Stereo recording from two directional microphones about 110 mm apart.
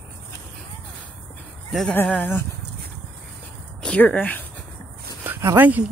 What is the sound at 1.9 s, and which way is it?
Speech, 15° left (ahead or behind).